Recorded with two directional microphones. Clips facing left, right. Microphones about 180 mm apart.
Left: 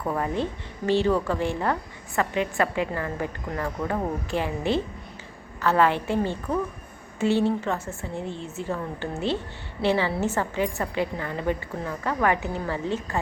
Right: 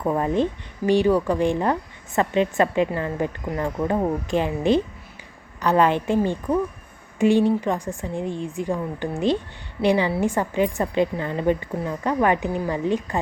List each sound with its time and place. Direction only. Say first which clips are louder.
0.0 s a woman's voice: right 5 dB; 20° right (ahead or behind)